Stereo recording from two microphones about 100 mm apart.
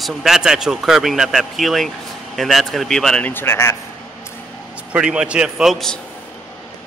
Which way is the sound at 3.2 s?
20° left (ahead or behind).